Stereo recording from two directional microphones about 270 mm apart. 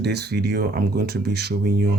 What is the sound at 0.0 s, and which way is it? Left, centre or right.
Speech, right.